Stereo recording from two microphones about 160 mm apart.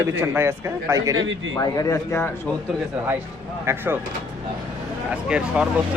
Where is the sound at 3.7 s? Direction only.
15° right (ahead or behind).